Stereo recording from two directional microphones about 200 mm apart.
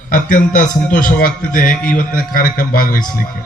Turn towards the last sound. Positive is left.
turn(degrees=45)  # may be behind; listen again after turning